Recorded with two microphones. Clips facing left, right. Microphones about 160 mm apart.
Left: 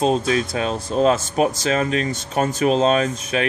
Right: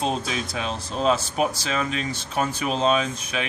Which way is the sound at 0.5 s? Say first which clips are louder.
Left 6 dB; 45° left (ahead or behind).